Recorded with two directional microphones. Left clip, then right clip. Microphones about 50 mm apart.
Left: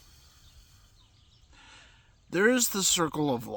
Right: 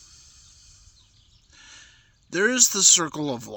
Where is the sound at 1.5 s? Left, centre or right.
Left.